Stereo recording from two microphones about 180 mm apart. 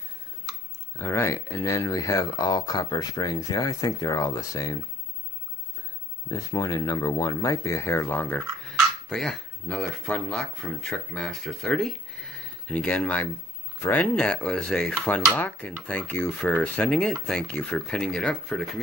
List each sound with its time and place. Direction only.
0.9 s speech: 15° left (ahead or behind)
6.2 s speech: 20° left (ahead or behind)